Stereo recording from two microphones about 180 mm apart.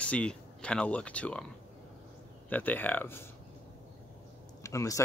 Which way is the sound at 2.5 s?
10° left (ahead or behind).